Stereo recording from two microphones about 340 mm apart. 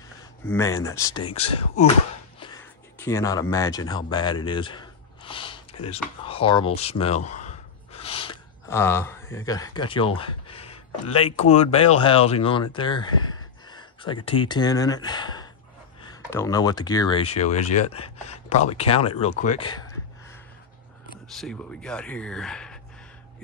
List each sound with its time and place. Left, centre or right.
0.5 s speech: centre
2.4 s a sound: centre
6.2 s speech: centre
21.4 s speech: centre